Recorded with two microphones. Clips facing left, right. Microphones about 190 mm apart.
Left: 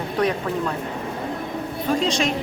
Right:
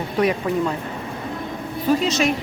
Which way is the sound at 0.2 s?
10° right (ahead or behind).